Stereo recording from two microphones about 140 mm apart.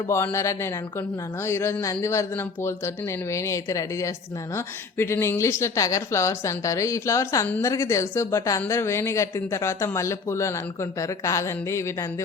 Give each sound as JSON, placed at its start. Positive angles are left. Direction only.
{"t": 0.1, "sound": "speech", "side_deg": 20}